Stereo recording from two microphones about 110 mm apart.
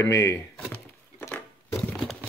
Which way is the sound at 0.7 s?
15° left (ahead or behind).